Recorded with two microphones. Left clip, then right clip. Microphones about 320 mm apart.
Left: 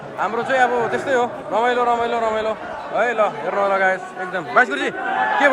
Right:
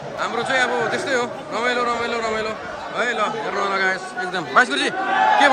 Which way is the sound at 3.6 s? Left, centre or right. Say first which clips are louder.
Left 4 dB; centre.